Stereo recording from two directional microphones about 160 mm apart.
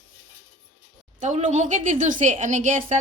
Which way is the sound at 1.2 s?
50° right (ahead or behind).